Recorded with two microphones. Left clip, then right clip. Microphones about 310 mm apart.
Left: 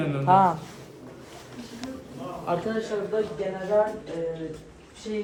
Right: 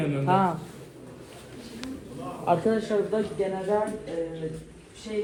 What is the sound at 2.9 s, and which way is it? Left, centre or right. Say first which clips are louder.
Speech: right 4 dB; right.